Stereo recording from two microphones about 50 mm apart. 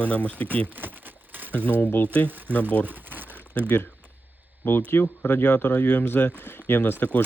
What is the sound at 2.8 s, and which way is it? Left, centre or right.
Crumpling, right.